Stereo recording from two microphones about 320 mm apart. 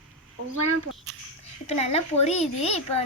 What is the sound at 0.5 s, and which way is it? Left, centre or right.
Speech, right.